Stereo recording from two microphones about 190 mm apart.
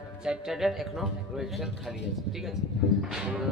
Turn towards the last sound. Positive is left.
turn(degrees=-5)  # may be behind; listen again after turning